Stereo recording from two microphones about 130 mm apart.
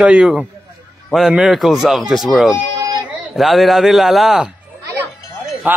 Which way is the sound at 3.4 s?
Centre (ahead or behind).